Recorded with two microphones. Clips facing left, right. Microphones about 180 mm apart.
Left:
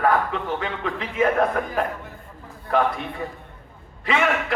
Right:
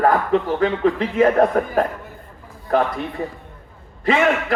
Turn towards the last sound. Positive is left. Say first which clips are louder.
# right 5 dB
turn(degrees=-40)  # may be behind; listen again after turning